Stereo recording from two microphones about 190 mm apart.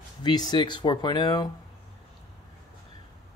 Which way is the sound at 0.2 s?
20° left (ahead or behind).